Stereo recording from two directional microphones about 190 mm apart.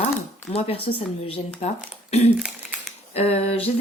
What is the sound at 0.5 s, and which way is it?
Speech, 30° left (ahead or behind).